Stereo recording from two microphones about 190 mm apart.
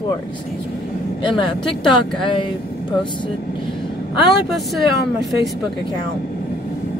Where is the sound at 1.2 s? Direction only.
25° left (ahead or behind).